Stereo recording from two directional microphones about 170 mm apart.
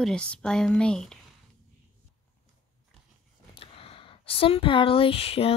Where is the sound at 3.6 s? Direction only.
35° left (ahead or behind).